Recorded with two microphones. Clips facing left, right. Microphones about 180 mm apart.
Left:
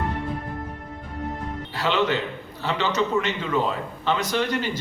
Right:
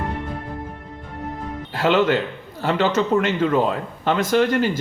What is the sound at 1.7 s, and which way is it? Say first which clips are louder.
A man's voice: right 6 dB; 50° right (ahead or behind).